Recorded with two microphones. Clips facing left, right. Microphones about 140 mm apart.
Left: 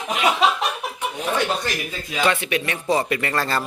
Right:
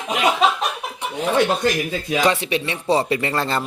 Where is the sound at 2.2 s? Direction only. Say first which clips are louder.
Even; 35° right (ahead or behind).